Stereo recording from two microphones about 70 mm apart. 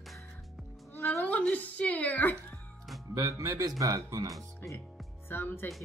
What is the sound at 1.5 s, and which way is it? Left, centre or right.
A woman's voice, centre.